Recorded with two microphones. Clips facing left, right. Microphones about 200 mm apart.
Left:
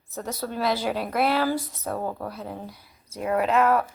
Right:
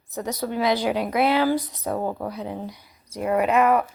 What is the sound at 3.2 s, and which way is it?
Speech, 5° right (ahead or behind).